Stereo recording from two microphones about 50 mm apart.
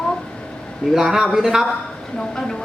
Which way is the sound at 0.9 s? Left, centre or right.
Centre.